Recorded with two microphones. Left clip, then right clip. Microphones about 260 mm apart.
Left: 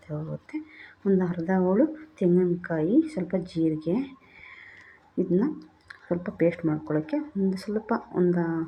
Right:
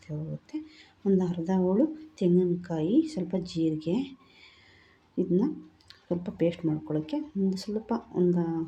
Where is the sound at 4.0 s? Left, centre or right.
Right.